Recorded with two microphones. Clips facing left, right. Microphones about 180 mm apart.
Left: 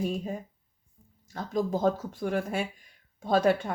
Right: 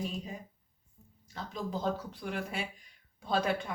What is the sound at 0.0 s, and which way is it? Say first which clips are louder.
Speech: left 7 dB; 50° left (ahead or behind).